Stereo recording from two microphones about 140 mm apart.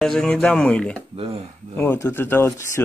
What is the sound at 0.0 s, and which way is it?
Speech, 5° left (ahead or behind).